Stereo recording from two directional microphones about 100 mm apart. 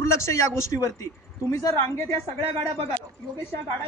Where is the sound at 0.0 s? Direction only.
30° left (ahead or behind).